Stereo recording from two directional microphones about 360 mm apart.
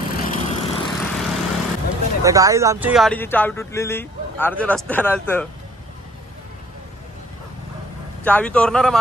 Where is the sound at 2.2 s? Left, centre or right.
Centre.